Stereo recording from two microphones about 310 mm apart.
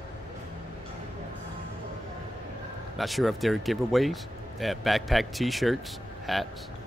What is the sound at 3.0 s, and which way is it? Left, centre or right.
Speech, centre.